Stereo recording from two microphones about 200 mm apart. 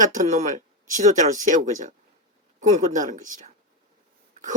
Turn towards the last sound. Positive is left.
turn(degrees=-40)  # may be behind; listen again after turning